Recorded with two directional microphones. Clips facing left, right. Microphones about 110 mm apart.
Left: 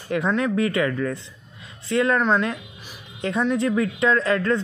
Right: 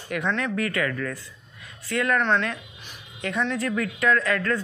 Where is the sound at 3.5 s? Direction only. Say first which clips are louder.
Left 5 dB; 25° left (ahead or behind).